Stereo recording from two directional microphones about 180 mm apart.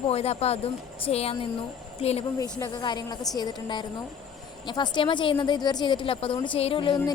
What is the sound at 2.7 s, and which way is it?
A woman's voice, 25° left (ahead or behind).